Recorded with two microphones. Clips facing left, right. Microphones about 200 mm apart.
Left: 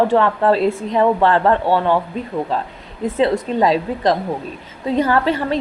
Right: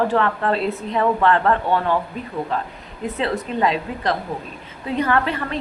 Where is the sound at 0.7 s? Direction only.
50° left (ahead or behind).